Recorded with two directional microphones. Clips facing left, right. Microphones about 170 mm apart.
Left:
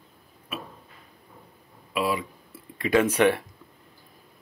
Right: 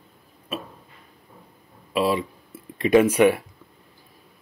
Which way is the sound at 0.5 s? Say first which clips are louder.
Right 4 dB; 30° right (ahead or behind).